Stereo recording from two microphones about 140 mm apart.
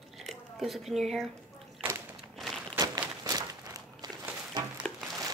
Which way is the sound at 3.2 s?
25° right (ahead or behind).